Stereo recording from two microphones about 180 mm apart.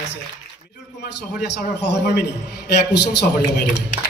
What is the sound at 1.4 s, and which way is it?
Speech, 70° left (ahead or behind).